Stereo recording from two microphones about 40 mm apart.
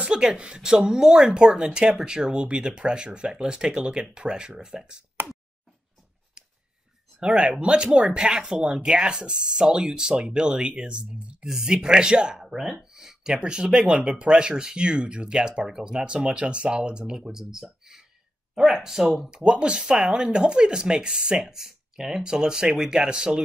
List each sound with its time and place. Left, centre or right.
0.1 s speech: right
7.2 s speech: right
11.4 s speech: centre
12.4 s speech: centre
19.3 s speech: right